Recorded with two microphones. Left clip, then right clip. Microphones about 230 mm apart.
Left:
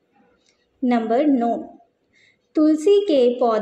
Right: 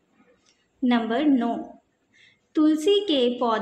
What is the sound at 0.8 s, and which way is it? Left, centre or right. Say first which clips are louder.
Speech: left 5 dB; centre.